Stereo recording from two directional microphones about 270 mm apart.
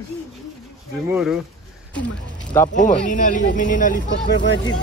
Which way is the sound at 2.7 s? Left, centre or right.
Left.